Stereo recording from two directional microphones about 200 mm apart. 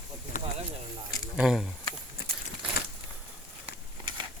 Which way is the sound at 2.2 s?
55° left (ahead or behind).